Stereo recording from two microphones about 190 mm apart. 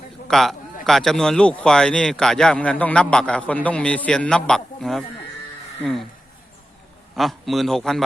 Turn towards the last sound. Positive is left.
turn(degrees=0)  # may be behind; listen again after turning